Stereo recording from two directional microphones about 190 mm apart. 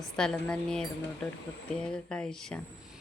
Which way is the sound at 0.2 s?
5° left (ahead or behind).